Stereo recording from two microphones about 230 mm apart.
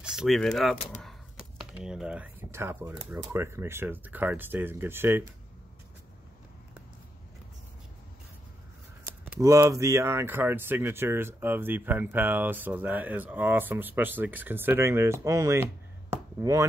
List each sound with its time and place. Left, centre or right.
0.0 s speech: centre
0.7 s speech: left
1.8 s speech: centre
9.0 s speech: centre